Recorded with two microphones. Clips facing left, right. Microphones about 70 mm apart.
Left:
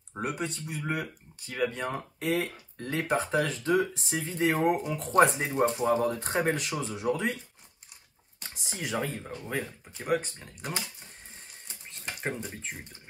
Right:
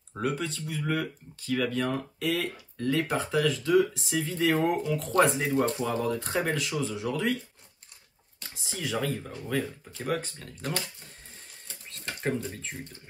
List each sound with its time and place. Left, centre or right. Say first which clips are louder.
0.1 s speech: right 2 dB; centre
8.6 s speech: right 2 dB; left
11.6 s a sound: right 1 dB; centre